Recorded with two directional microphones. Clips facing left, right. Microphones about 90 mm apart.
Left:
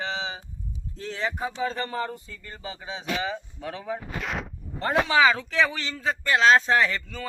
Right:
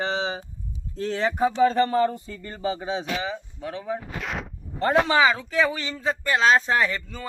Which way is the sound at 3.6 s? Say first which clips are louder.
Right 5 dB; 20° right (ahead or behind).